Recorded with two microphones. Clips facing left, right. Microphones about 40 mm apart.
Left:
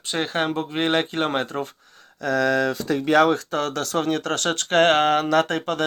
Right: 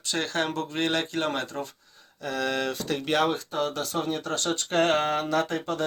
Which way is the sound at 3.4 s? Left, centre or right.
Left.